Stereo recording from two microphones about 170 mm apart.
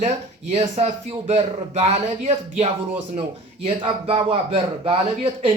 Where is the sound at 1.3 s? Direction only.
35° right (ahead or behind).